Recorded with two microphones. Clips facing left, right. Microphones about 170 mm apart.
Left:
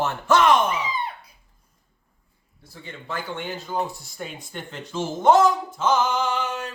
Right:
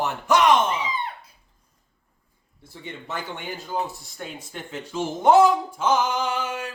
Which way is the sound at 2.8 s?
20° right (ahead or behind).